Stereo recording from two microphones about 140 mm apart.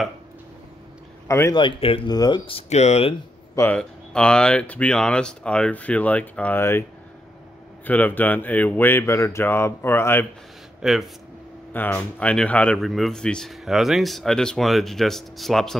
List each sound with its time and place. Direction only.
1.2 s a sound: 20° left (ahead or behind)
1.5 s speech: 35° left (ahead or behind)
2.0 s speech: 30° left (ahead or behind)
2.7 s speech: 50° left (ahead or behind)
3.7 s speech: 5° left (ahead or behind)
7.8 s speech: 10° left (ahead or behind)
10.8 s speech: centre (ahead or behind)
11.7 s speech: 10° left (ahead or behind)